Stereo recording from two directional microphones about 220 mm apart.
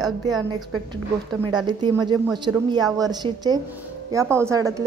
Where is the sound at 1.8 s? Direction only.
20° right (ahead or behind).